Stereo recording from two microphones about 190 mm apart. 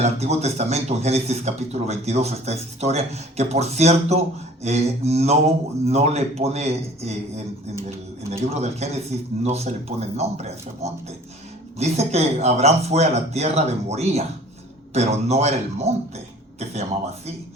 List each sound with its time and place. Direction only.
0.0 s speech: 35° right (ahead or behind)